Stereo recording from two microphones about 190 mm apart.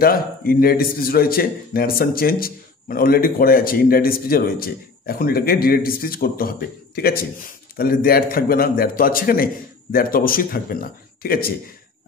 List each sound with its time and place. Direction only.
0.0 s speech: 50° left (ahead or behind)